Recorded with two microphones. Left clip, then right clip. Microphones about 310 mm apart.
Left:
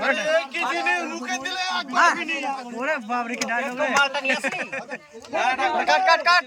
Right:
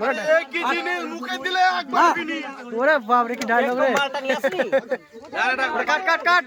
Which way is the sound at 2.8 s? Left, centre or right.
Centre.